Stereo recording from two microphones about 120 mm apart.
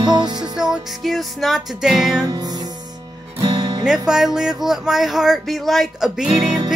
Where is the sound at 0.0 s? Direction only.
40° right (ahead or behind).